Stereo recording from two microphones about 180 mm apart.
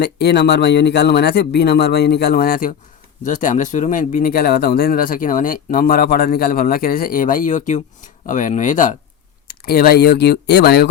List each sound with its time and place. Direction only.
0.0 s speech: 65° left (ahead or behind); by 9.0 s 45° left (ahead or behind)
9.5 s speech: 55° left (ahead or behind)